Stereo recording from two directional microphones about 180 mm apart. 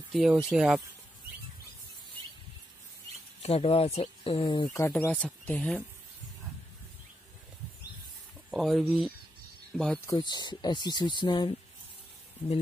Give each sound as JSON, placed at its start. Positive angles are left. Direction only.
{"t": 0.1, "sound": "speech", "side_deg": 0}
{"t": 3.4, "sound": "speech", "side_deg": 35}
{"t": 4.7, "sound": "speech", "side_deg": 15}
{"t": 8.5, "sound": "speech", "side_deg": 0}
{"t": 10.0, "sound": "speech", "side_deg": 25}